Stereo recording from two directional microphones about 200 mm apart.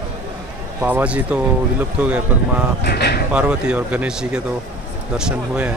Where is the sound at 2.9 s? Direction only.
55° left (ahead or behind).